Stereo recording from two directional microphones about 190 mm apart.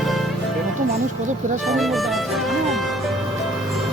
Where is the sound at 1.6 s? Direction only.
Centre (ahead or behind).